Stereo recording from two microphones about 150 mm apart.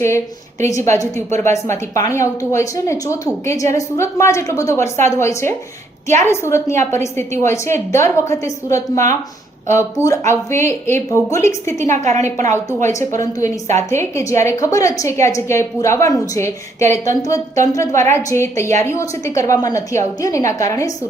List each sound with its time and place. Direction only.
0.9 s a woman's voice: 20° left (ahead or behind)
11.9 s a woman's voice: 55° right (ahead or behind)
12.9 s a woman's voice: 20° left (ahead or behind)